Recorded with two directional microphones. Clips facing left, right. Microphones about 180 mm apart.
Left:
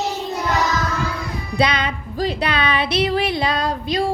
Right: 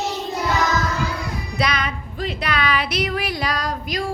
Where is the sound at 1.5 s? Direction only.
30° left (ahead or behind).